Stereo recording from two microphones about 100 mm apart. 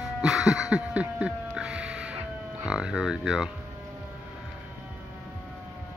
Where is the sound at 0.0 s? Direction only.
5° right (ahead or behind).